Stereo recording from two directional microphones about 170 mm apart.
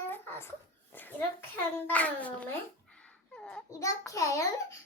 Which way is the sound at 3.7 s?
20° left (ahead or behind).